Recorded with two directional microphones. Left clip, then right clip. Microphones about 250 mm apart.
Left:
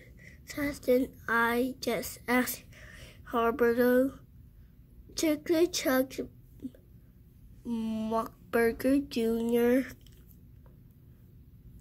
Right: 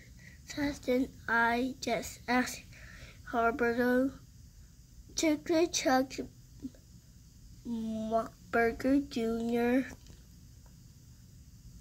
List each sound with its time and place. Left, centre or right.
0.2 s a woman's voice: centre
7.6 s speech: centre